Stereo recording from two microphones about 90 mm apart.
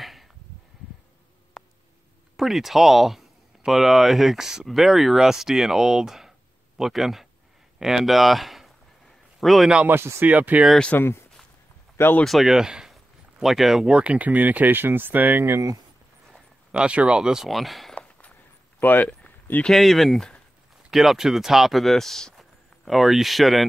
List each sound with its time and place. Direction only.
0.0 s a sound: centre (ahead or behind)
2.3 s speech: centre (ahead or behind)
7.8 s a sound: 5° right (ahead or behind)
9.8 s speech: 25° right (ahead or behind)
10.2 s speech: 15° right (ahead or behind)
10.9 s speech: 25° left (ahead or behind)
12.3 s speech: centre (ahead or behind); by 15.8 s 30° right (ahead or behind)
16.7 s speech: 10° right (ahead or behind)
17.9 s walk: 15° left (ahead or behind)
18.8 s a sound: 20° left (ahead or behind)
19.7 s speech: centre (ahead or behind)